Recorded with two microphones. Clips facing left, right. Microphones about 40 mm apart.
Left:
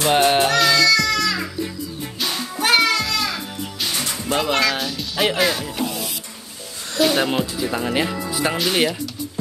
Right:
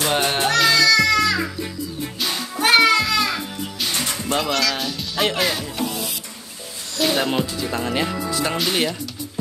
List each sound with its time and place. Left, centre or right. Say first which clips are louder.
0.1 s music: left 5 dB; centre
4.0 s music: left 1 dB; centre
4.5 s music: left 4 dB; left
4.7 s music: left 1 dB; centre
7.0 s speech: left 2 dB; centre